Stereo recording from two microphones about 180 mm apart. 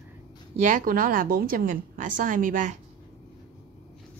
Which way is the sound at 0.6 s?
45° right (ahead or behind).